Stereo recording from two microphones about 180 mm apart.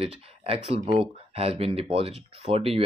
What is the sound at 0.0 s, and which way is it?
Speech, 30° right (ahead or behind).